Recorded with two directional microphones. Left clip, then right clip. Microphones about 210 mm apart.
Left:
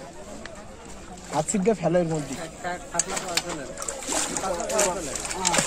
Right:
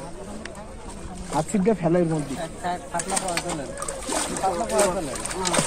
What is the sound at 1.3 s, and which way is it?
Speech, 50° left (ahead or behind).